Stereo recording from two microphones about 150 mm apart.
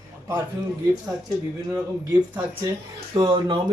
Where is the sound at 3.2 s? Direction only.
30° right (ahead or behind).